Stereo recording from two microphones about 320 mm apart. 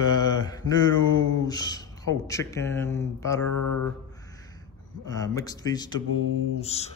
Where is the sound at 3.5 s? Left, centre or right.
Left.